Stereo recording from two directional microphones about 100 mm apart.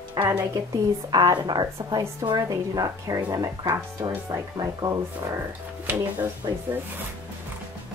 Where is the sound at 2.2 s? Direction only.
40° right (ahead or behind).